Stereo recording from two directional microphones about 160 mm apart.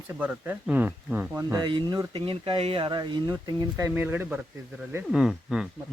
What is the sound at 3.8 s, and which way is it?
Speech, 15° right (ahead or behind).